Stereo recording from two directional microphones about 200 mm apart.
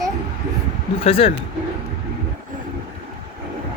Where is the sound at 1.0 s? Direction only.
30° left (ahead or behind).